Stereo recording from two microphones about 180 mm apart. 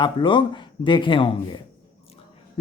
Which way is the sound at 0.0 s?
25° left (ahead or behind).